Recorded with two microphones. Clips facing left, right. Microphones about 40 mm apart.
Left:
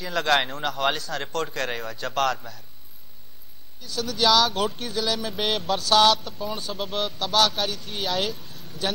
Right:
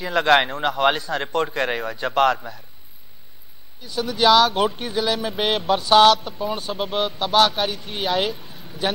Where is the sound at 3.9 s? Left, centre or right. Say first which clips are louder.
Right 5 dB; right.